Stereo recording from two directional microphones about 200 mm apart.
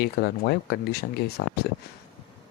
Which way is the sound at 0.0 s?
50° left (ahead or behind).